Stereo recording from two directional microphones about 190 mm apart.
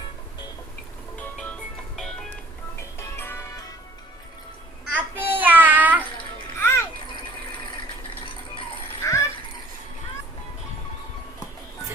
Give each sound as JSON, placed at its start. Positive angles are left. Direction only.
{"t": 1.2, "sound": "music", "side_deg": 5}
{"t": 4.9, "sound": "child singing", "side_deg": -10}
{"t": 6.6, "sound": "children playing", "side_deg": 15}
{"t": 9.0, "sound": "a sound", "side_deg": 15}